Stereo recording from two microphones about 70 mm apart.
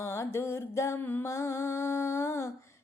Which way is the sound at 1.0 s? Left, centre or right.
Left.